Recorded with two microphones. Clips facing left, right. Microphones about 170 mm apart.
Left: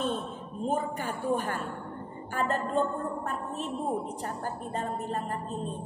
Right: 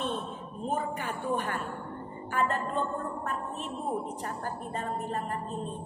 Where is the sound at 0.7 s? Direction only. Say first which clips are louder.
Left 2 dB; 35° left (ahead or behind).